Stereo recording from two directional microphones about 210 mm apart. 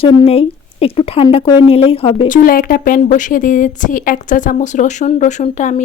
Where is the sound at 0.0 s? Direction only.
25° left (ahead or behind).